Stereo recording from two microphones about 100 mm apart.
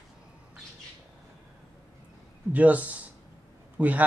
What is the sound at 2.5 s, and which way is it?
A man's voice, 15° right (ahead or behind).